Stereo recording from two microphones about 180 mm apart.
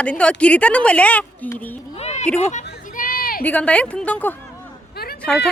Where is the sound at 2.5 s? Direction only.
45° left (ahead or behind).